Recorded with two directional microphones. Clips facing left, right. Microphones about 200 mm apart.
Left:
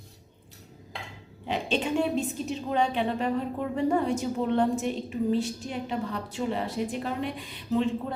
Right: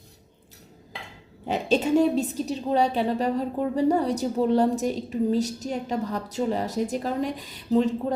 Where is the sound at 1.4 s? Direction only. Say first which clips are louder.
Right 5 dB; 40° right (ahead or behind).